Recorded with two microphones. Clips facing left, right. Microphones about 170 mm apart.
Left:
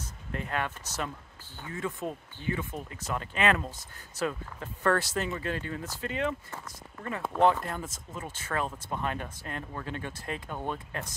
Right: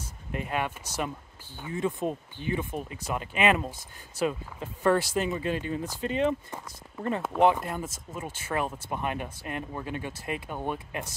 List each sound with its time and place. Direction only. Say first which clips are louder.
0.0 s speech: right 2 dB; 15° right (ahead or behind)
7.3 s speech: right 1 dB; 15° right (ahead or behind)